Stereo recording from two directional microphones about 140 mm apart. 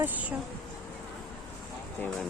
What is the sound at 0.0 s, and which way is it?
Speech, 10° right (ahead or behind).